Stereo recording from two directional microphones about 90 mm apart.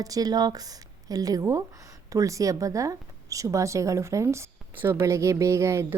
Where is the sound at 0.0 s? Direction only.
45° right (ahead or behind).